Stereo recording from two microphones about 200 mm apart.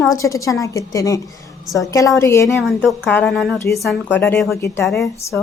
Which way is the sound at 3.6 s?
15° left (ahead or behind).